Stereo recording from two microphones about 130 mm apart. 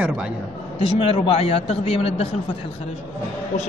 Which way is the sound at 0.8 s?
45° left (ahead or behind).